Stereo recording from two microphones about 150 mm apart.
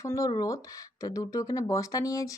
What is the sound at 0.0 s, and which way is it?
Speech, 20° left (ahead or behind).